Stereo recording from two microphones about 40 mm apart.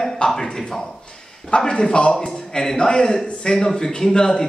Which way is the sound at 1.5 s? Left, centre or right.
Left.